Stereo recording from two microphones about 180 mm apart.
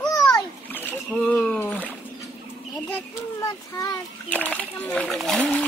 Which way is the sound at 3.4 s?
20° left (ahead or behind).